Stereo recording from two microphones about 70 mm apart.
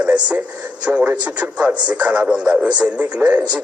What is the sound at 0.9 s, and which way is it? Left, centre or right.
Speech, right.